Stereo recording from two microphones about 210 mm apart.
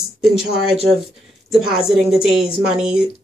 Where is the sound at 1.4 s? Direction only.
Centre (ahead or behind).